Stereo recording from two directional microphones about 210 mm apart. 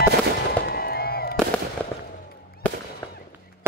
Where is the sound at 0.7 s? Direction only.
45° left (ahead or behind).